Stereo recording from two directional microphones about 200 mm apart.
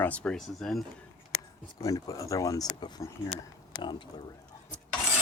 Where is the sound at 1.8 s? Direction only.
15° left (ahead or behind).